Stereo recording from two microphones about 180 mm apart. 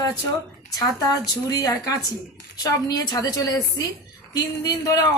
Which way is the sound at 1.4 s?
20° left (ahead or behind).